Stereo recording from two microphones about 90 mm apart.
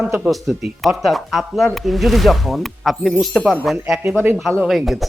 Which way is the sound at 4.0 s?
25° right (ahead or behind).